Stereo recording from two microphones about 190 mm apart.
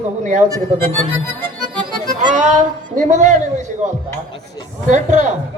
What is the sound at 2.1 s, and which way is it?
Music, 40° right (ahead or behind).